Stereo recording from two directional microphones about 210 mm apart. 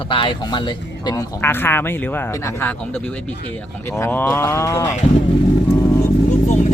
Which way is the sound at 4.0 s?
10° left (ahead or behind).